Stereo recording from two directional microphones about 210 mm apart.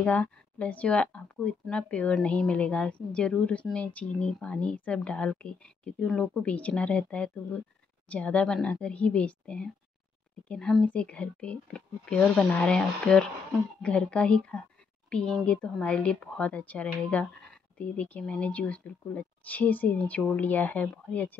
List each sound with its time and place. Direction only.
0.0 s a woman's voice: 5° left (ahead or behind)